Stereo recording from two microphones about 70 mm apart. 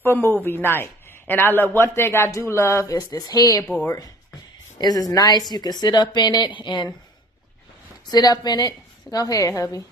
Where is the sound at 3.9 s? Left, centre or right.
Left.